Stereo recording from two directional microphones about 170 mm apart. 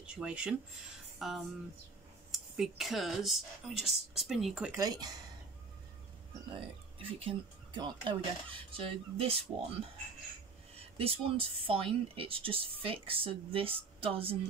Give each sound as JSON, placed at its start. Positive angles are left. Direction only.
{"t": 0.0, "sound": "speech", "side_deg": -5}
{"t": 4.7, "sound": "speech", "side_deg": -20}
{"t": 7.0, "sound": "speech", "side_deg": -30}